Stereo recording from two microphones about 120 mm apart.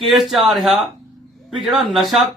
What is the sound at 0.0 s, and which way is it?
A man's voice, centre (ahead or behind).